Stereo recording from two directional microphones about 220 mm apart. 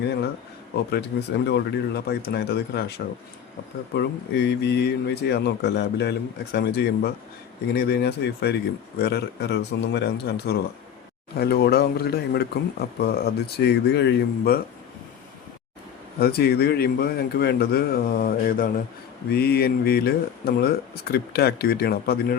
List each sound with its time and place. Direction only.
0.9 s speech: 50° left (ahead or behind)
3.9 s speech: 50° left (ahead or behind)
16.2 s speech: 45° left (ahead or behind)